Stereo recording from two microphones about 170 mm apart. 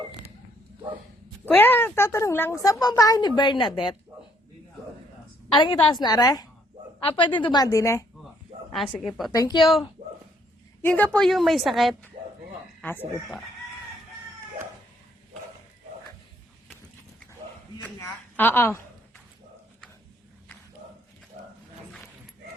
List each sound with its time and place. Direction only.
1.5 s speech: 10° left (ahead or behind); by 3.9 s 30° left (ahead or behind)
5.5 s speech: 30° left (ahead or behind)
9.0 s a woman's voice: centre (ahead or behind)
9.3 s speech: 25° left (ahead or behind)
10.8 s a woman's voice: 10° left (ahead or behind)
18.3 s a sound: 10° left (ahead or behind)